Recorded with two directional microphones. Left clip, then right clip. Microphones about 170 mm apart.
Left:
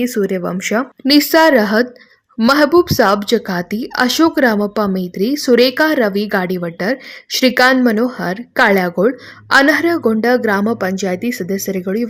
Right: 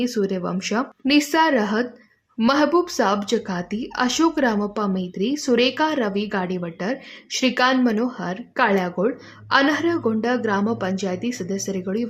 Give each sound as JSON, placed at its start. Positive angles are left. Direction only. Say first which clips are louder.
{"t": 0.0, "sound": "a woman's voice", "louder": "left 6 dB", "side_deg": 25}